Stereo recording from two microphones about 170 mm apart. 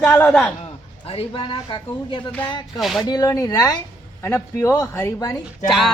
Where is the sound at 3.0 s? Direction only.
25° left (ahead or behind).